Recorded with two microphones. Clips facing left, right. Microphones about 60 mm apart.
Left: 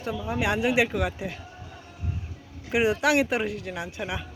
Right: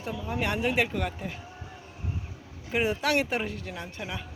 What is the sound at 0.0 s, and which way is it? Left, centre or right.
Speech, centre.